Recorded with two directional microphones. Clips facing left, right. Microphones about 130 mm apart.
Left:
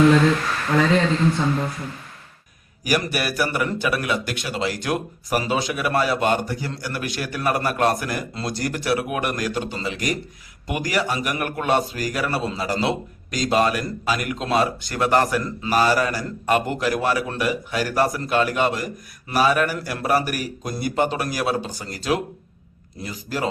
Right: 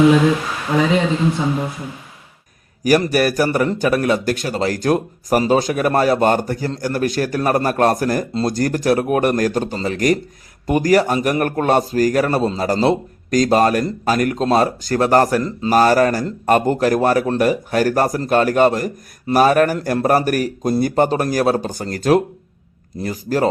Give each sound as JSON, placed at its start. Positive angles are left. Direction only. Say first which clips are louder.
{"t": 0.0, "sound": "speech", "louder": "right 3 dB", "side_deg": -10}
{"t": 3.2, "sound": "a man's voice", "louder": "right 7 dB", "side_deg": -45}